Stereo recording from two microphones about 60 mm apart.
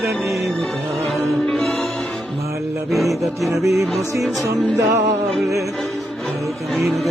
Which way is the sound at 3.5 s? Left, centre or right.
Right.